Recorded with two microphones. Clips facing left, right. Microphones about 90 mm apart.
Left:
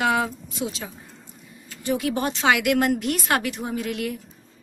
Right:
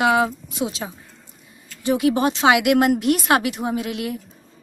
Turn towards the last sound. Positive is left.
turn(degrees=-15)  # may be behind; listen again after turning